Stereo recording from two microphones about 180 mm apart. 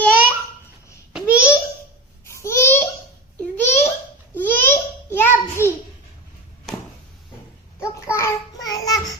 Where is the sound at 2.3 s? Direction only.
15° left (ahead or behind).